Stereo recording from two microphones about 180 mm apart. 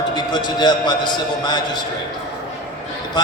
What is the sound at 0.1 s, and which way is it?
A man's voice, 25° left (ahead or behind).